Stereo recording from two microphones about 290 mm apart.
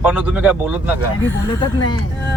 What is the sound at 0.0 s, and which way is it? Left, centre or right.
Speech, centre.